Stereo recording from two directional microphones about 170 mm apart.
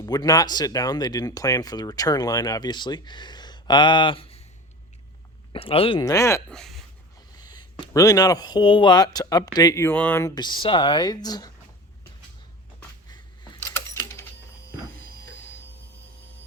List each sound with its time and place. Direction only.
0.0 s speech: 25° left (ahead or behind)
5.5 s speech: 35° left (ahead or behind)
6.0 s speech: 20° left (ahead or behind)
6.5 s speech: centre (ahead or behind)
7.3 s speech: 25° left (ahead or behind)
13.1 s a sound: 25° left (ahead or behind)